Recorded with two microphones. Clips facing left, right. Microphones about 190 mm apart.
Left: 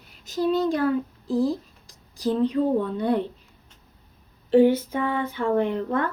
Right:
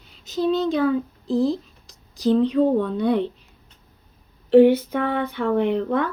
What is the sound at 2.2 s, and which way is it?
Speech, 75° right (ahead or behind).